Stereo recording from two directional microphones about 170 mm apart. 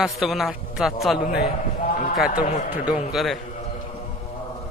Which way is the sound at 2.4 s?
10° right (ahead or behind).